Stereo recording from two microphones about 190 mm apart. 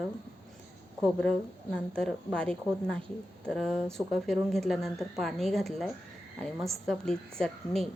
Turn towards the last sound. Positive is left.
turn(degrees=0)  # may be behind; listen again after turning